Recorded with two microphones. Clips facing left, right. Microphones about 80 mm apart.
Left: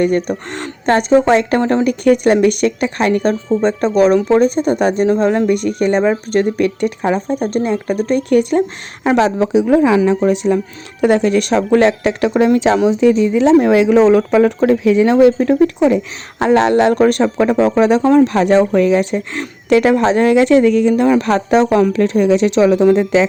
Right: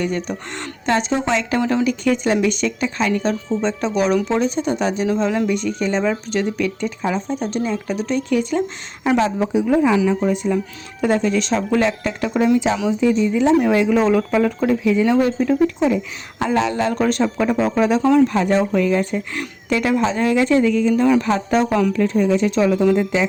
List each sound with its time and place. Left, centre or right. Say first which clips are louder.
0.0 s speech: left 8 dB; left
9.1 s speech: left 5 dB; left
9.6 s speech: left 4 dB; left
10.1 s speech: left 5 dB; left
11.0 s speech: left 5 dB; left
19.7 s speech: left 7 dB; left